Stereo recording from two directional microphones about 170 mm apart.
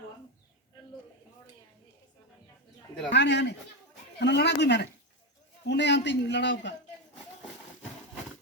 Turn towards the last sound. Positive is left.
turn(degrees=90)